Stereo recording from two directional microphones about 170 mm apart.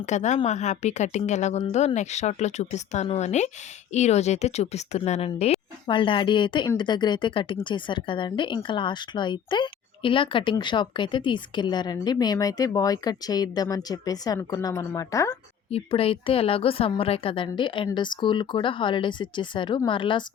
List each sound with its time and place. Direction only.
0.0 s a woman's voice: 45° left (ahead or behind); by 15.4 s 20° left (ahead or behind)
15.7 s speech: 35° left (ahead or behind)